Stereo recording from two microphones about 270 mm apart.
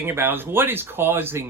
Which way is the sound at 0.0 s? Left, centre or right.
Centre.